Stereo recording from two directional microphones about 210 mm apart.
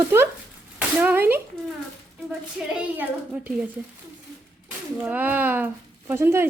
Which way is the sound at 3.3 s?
10° right (ahead or behind).